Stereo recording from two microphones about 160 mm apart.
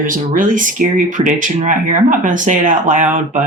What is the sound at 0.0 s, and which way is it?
Speech, 55° right (ahead or behind).